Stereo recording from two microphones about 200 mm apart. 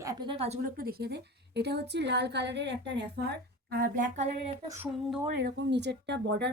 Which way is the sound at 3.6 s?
45° right (ahead or behind).